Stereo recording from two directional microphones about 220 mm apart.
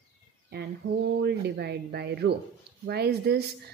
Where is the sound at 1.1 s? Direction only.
50° right (ahead or behind).